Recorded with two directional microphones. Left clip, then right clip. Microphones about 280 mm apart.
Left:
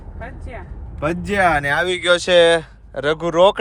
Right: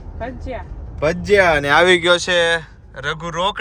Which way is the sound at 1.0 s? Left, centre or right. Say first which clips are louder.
Right 5 dB; centre.